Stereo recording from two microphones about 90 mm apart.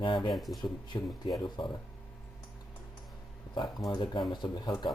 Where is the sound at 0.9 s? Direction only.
45° left (ahead or behind).